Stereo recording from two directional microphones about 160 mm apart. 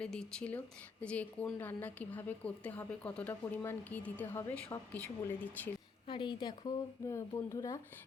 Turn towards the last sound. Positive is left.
turn(degrees=20)  # may be behind; listen again after turning